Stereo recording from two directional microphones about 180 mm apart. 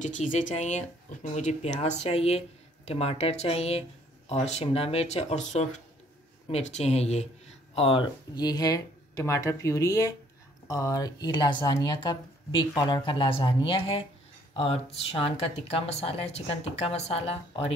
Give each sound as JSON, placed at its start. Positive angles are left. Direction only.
{"t": 0.0, "sound": "speech", "side_deg": 40}
{"t": 8.4, "sound": "speech", "side_deg": 20}